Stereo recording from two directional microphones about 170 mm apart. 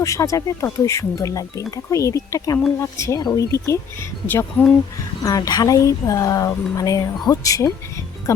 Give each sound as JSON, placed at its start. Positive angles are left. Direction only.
{"t": 0.0, "sound": "speech", "side_deg": 20}
{"t": 5.2, "sound": "speech", "side_deg": 20}